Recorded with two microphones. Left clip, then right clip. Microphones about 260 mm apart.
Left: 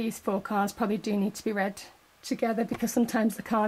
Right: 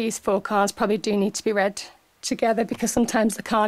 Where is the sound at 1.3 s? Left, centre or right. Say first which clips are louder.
Right 8 dB; centre.